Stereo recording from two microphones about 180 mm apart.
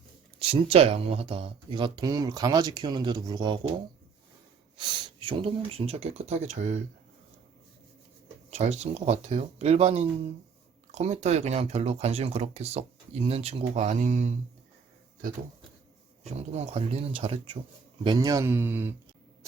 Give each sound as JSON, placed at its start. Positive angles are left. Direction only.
{"t": 0.3, "sound": "speech", "side_deg": -30}
{"t": 4.8, "sound": "speech", "side_deg": -25}
{"t": 8.4, "sound": "speech", "side_deg": -35}
{"t": 16.6, "sound": "speech", "side_deg": -35}